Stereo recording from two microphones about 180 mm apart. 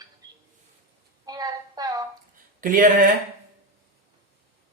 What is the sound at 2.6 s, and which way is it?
Speech, 50° right (ahead or behind).